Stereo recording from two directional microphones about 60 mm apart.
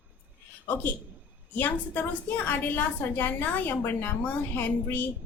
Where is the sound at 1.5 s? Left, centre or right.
Left.